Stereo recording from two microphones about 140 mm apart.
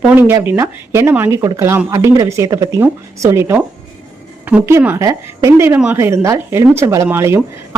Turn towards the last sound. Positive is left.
turn(degrees=-15)  # may be behind; listen again after turning